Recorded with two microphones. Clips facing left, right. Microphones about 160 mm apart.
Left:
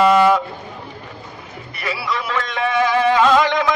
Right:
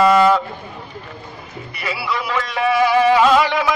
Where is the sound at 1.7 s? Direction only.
Centre (ahead or behind).